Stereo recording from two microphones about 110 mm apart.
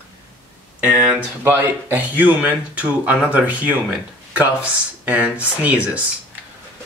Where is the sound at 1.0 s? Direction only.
20° right (ahead or behind).